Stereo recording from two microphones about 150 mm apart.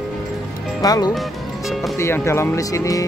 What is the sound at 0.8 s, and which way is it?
Speech, 25° left (ahead or behind).